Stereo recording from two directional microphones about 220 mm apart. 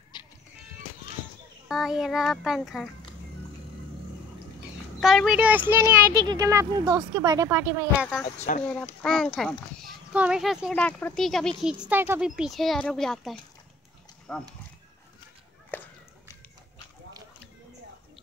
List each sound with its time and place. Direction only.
0.1 s music: 20° left (ahead or behind)
1.7 s speech: centre (ahead or behind)
4.6 s speech: centre (ahead or behind)
8.4 s speech: 30° left (ahead or behind)
9.0 s speech: 5° left (ahead or behind)
15.7 s a sound: 10° left (ahead or behind)